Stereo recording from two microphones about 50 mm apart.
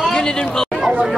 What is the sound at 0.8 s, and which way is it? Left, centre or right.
Chatter, centre.